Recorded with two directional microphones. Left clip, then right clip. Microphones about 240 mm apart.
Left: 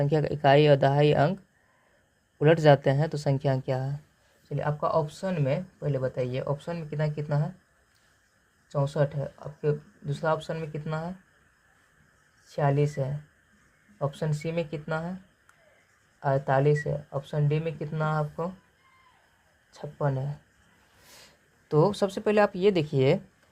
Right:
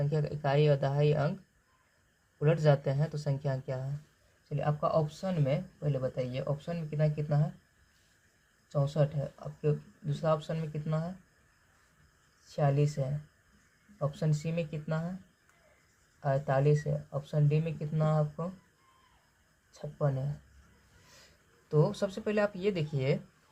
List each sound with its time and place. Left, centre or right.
0.0 s speech: left
2.4 s speech: left
8.7 s speech: left
12.5 s speech: left
16.2 s speech: left
19.7 s speech: left
21.7 s speech: left